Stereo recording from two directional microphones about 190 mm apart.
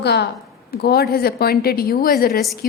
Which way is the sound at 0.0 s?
60° left (ahead or behind).